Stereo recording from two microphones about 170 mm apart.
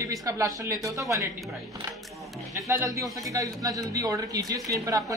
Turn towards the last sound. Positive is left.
turn(degrees=-20)  # may be behind; listen again after turning